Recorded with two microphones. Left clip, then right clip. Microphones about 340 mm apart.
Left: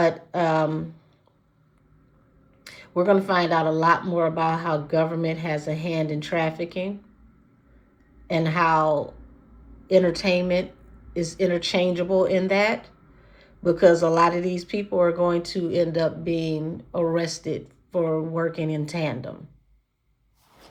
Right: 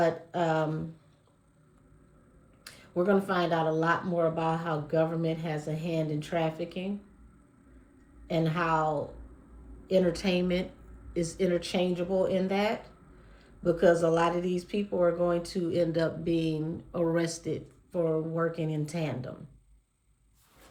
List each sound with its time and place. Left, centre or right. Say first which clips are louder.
0.0 s a sound: left 6 dB; centre
2.6 s speech: left 7 dB; centre
8.3 s speech: left 7 dB; centre
9.9 s speech: left 7 dB; centre